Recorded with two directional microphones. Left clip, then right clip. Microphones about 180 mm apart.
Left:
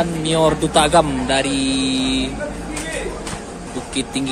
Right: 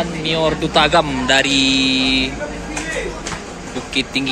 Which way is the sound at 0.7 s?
10° left (ahead or behind).